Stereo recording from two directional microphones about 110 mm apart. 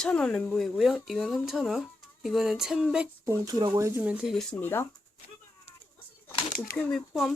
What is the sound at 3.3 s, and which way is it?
Speech, 30° right (ahead or behind).